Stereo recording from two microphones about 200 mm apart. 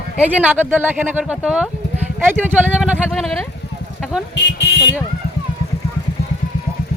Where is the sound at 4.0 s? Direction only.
Centre (ahead or behind).